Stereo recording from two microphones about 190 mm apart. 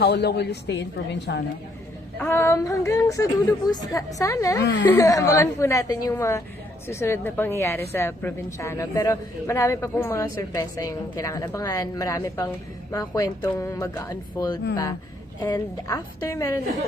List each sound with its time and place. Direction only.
0.0 s a woman's voice: 60° left (ahead or behind)
2.1 s a woman's voice: 10° left (ahead or behind)
4.6 s speech: 70° left (ahead or behind)
4.9 s a woman's voice: 15° left (ahead or behind)